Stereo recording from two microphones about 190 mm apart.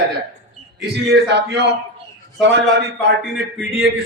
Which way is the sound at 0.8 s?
60° right (ahead or behind).